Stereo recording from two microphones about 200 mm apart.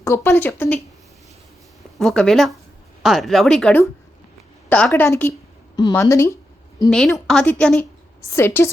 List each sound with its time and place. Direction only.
0.0 s speech: 15° left (ahead or behind)
2.0 s speech: centre (ahead or behind)
5.7 s a sound: 15° left (ahead or behind)
7.3 s speech: 5° left (ahead or behind)